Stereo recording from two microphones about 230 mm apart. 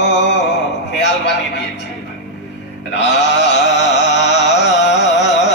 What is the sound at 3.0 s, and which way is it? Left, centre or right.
Carnatic music, left.